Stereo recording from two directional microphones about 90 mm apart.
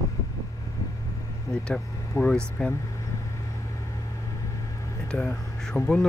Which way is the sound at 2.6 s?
10° left (ahead or behind).